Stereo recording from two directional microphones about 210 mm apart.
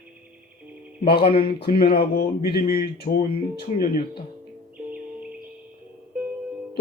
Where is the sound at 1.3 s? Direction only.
45° left (ahead or behind).